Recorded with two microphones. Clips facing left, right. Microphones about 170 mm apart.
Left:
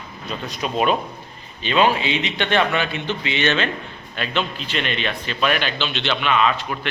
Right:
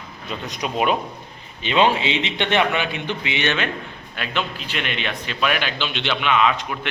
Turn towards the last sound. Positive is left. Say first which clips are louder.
# even
turn(degrees=-10)  # may be behind; listen again after turning